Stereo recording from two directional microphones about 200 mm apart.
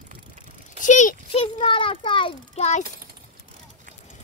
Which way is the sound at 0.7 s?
40° left (ahead or behind).